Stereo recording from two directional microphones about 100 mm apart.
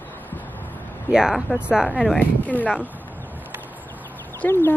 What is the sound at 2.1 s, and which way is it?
Speech, 15° left (ahead or behind).